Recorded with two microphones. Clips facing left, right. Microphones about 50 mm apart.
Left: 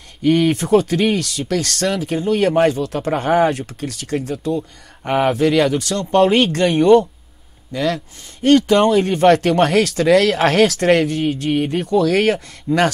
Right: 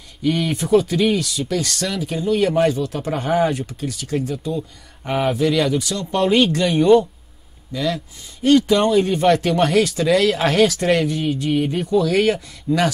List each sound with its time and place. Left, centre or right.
0.2 s speech: left
2.8 s speech: left
3.1 s speech: left
4.6 s speech: left
12.7 s speech: centre